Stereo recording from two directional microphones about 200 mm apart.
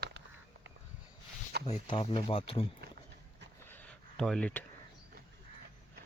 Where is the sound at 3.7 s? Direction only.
5° left (ahead or behind).